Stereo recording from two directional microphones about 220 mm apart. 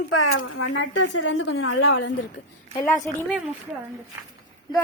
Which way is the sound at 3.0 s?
Centre (ahead or behind).